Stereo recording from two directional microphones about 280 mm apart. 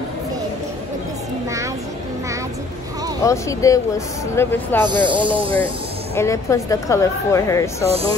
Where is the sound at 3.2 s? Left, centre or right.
Centre.